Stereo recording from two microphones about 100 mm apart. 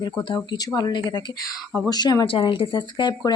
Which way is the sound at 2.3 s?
60° left (ahead or behind).